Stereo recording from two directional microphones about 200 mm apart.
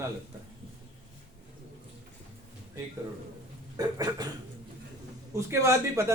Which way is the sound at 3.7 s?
20° right (ahead or behind).